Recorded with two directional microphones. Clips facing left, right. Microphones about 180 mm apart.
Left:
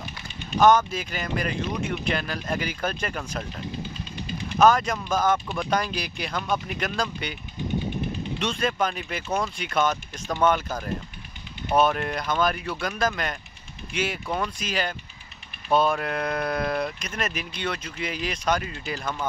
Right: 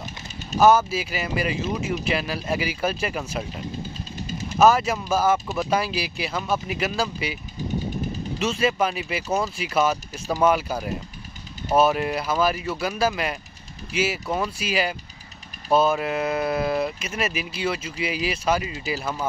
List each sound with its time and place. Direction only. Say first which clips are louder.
0.6 s speech: right 1 dB; 5° right (ahead or behind)
4.3 s vehicle: right 1 dB; 45° right (ahead or behind)
4.6 s speech: right 2 dB; 5° right (ahead or behind)
8.4 s speech: right 4 dB; 5° right (ahead or behind)